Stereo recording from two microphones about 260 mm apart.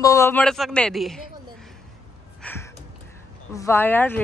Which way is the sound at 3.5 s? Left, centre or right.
Centre.